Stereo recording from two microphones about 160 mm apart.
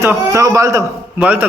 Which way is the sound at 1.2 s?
10° right (ahead or behind).